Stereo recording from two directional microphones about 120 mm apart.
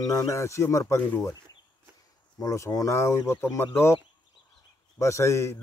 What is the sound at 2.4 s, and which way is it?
Speech, 25° left (ahead or behind).